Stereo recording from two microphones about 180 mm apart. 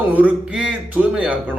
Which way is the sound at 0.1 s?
10° right (ahead or behind).